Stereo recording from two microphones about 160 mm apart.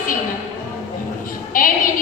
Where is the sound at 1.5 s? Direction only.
60° left (ahead or behind).